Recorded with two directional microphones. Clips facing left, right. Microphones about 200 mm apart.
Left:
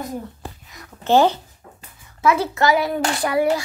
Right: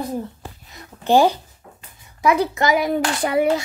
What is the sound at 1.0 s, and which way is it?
A woman's voice, 15° right (ahead or behind).